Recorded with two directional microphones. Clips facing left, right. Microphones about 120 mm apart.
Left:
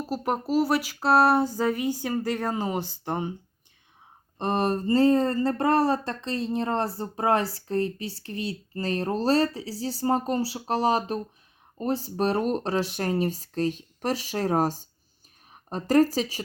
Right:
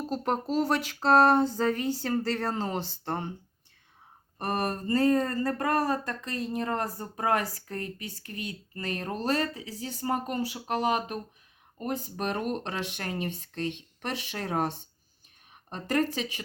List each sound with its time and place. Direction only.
0.0 s speech: 5° left (ahead or behind)
4.4 s speech: 25° left (ahead or behind)